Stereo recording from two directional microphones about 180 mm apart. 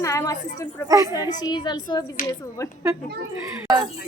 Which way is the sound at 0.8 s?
20° right (ahead or behind).